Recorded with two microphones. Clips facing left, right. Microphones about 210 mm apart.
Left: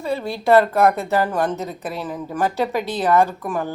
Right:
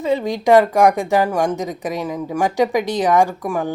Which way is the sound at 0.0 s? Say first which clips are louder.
Right 5 dB; 15° right (ahead or behind).